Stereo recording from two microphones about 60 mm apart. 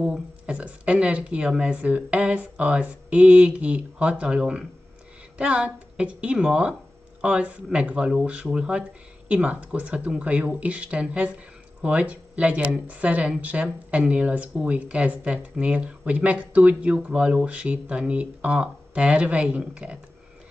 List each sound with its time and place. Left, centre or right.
0.5 s speech: right